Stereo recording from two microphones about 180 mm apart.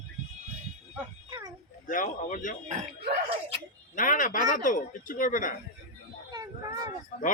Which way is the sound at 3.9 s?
50° left (ahead or behind).